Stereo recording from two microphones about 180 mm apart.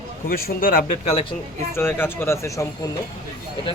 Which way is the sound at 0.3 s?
55° left (ahead or behind).